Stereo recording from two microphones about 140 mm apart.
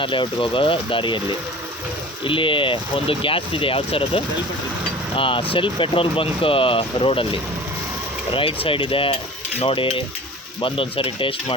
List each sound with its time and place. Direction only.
0.0 s speech: 35° left (ahead or behind)
2.2 s speech: 35° left (ahead or behind)